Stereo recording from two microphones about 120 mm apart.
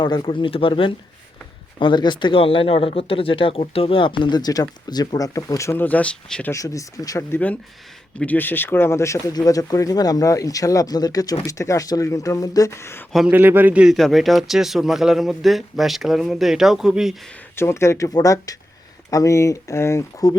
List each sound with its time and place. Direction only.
0.0 s speech: 40° left (ahead or behind); by 6.5 s 5° left (ahead or behind)
6.5 s speech: 25° left (ahead or behind)
13.3 s speech: 15° right (ahead or behind)
13.9 s speech: centre (ahead or behind)
17.6 s speech: 20° left (ahead or behind)